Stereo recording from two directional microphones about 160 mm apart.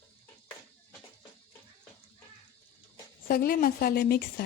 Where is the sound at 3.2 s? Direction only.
70° left (ahead or behind).